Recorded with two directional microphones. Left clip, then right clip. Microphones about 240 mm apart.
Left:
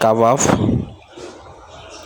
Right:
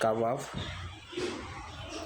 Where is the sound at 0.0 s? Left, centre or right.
Left.